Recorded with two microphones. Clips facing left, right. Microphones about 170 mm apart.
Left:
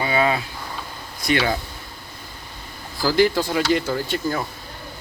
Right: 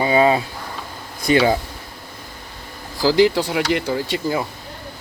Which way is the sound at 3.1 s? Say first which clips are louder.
Right 3 dB; 90° right.